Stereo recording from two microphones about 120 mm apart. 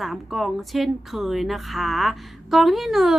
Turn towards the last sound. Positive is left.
turn(degrees=0)  # may be behind; listen again after turning